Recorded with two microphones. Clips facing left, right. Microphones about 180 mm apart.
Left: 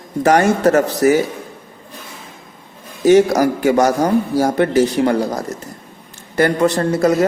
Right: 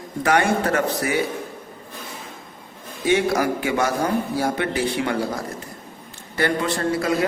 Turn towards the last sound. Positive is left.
turn(degrees=45)  # may be behind; listen again after turning